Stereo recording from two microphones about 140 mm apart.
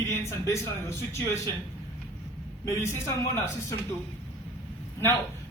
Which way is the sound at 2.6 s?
20° left (ahead or behind).